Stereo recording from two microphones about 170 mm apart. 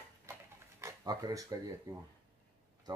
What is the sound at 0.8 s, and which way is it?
Speech, 20° right (ahead or behind).